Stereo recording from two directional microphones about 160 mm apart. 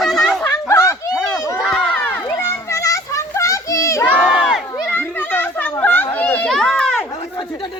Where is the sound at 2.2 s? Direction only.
20° left (ahead or behind).